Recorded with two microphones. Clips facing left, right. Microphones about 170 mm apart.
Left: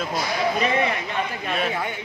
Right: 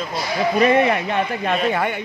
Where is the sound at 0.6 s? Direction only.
60° right (ahead or behind).